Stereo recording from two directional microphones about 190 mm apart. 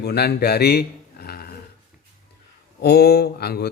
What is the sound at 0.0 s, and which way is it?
Speech, 55° left (ahead or behind).